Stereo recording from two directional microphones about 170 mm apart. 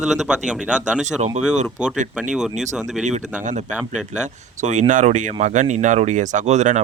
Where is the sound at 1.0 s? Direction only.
40° right (ahead or behind).